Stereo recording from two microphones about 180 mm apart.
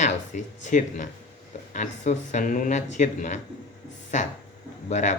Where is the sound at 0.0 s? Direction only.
45° left (ahead or behind).